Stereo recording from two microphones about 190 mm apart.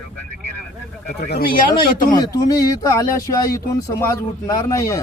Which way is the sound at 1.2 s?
55° left (ahead or behind).